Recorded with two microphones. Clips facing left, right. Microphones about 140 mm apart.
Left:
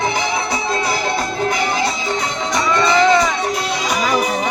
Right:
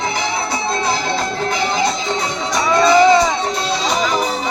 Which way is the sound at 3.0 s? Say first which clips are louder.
Right 1 dB; 15° right (ahead or behind).